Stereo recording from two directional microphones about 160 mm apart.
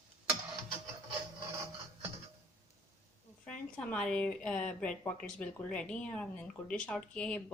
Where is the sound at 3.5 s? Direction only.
5° left (ahead or behind).